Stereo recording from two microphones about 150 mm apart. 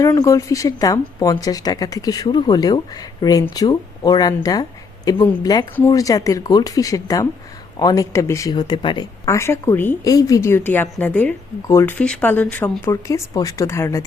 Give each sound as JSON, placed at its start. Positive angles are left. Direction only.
{"t": 0.0, "sound": "speech", "side_deg": 25}
{"t": 9.2, "sound": "a woman's voice", "side_deg": 20}
{"t": 12.9, "sound": "speech", "side_deg": 20}